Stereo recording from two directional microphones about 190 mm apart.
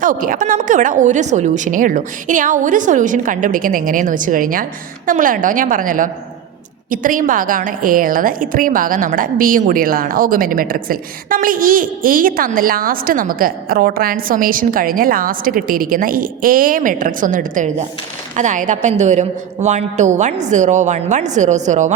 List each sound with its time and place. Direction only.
0.0 s a woman's voice: 45° right (ahead or behind)